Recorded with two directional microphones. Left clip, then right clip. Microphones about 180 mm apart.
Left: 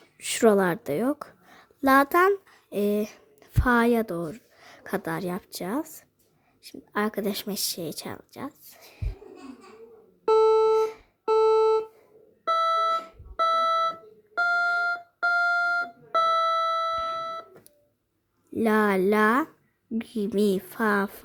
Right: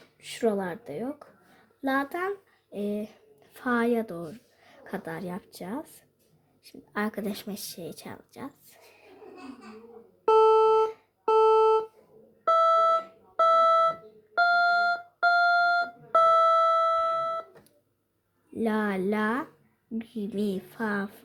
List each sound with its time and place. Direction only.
0.2 s a woman's voice: 50° left (ahead or behind)
1.8 s speech: 40° left (ahead or behind)
10.2 s music: 20° left (ahead or behind)
10.8 s music: 35° left (ahead or behind)
11.3 s music: 20° left (ahead or behind)
12.5 s alarm clock: 25° left (ahead or behind)
14.3 s music: 20° left (ahead or behind)
18.5 s speech: 35° left (ahead or behind)